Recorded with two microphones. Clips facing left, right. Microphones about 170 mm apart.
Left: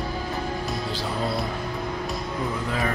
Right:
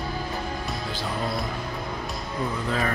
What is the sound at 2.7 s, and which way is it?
Speech, 10° left (ahead or behind).